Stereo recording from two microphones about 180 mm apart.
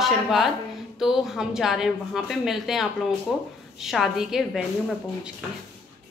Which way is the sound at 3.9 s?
Centre (ahead or behind).